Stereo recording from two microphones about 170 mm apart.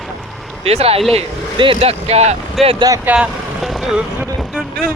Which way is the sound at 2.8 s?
20° right (ahead or behind).